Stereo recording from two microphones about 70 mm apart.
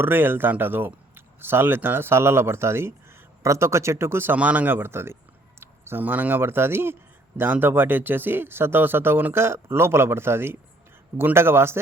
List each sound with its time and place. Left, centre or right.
0.0 s speech: right
4.4 s a man's voice: right
5.5 s a sound: right
6.0 s a man's voice: right